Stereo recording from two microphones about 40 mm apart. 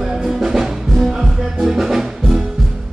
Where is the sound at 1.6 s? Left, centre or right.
Centre.